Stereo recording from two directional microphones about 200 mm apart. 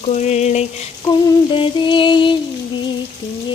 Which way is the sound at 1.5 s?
25° left (ahead or behind).